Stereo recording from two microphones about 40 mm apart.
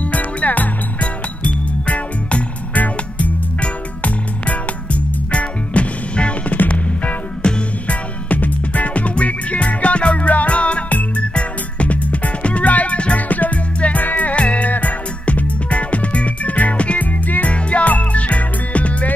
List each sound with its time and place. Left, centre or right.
0.1 s music: left
7.4 s music: left
7.9 s music: left